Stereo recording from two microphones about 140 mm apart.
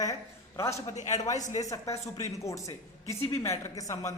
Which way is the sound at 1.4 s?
60° left (ahead or behind).